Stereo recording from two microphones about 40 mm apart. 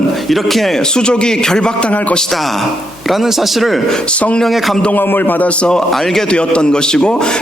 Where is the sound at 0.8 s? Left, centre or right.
Centre.